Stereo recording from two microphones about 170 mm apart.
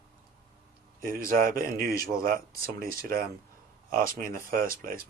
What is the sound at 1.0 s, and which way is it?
Speech, 55° right (ahead or behind).